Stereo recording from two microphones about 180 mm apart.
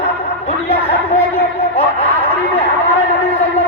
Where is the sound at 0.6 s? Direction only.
35° left (ahead or behind).